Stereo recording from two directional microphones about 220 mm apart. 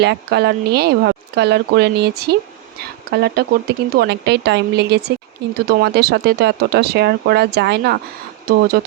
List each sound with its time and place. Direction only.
0.0 s speech: 50° right (ahead or behind)